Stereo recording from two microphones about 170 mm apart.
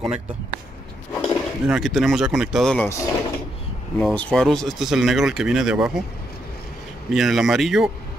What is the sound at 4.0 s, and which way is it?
Speech, 5° left (ahead or behind).